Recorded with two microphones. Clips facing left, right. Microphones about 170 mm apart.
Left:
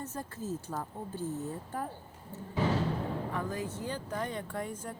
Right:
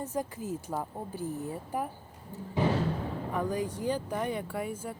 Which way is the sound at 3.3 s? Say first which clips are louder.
Right 4 dB; 15° right (ahead or behind).